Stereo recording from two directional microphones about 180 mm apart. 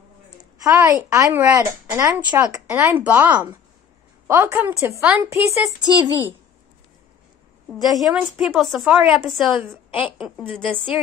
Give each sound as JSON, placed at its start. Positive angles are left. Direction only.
{"t": 0.7, "sound": "a woman's voice", "side_deg": -20}
{"t": 7.8, "sound": "a woman's voice", "side_deg": 0}